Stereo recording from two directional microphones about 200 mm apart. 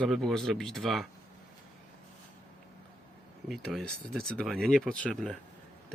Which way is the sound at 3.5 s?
Centre (ahead or behind).